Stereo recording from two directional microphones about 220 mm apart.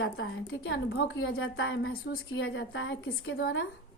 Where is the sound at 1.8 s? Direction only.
45° left (ahead or behind).